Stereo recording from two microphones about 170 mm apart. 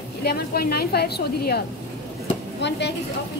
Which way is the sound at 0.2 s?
70° left (ahead or behind).